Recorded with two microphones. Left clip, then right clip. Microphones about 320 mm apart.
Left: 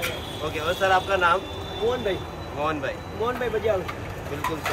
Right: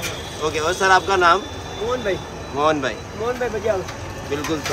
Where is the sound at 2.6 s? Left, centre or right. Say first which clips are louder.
Right 8 dB; centre.